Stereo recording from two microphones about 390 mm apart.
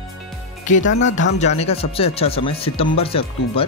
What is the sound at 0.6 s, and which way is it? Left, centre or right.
Speech, centre.